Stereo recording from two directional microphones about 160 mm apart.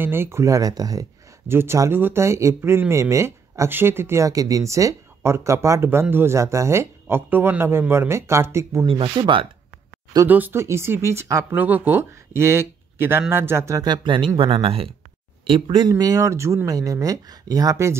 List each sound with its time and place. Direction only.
0.0 s speech: 15° right (ahead or behind)
8.8 s speech: 35° right (ahead or behind)
10.2 s speech: 10° right (ahead or behind)
13.9 s speech: 30° right (ahead or behind)